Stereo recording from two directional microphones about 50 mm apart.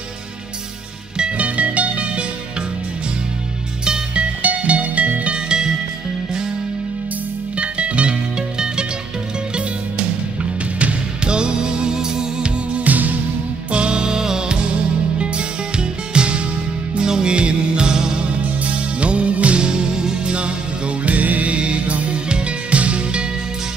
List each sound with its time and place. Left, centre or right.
1.1 s music: right
3.8 s music: centre
7.5 s music: right
10.8 s music: right
12.7 s music: right
13.7 s music: centre